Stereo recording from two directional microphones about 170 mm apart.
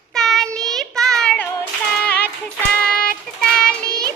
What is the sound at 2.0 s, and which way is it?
Music, 10° left (ahead or behind).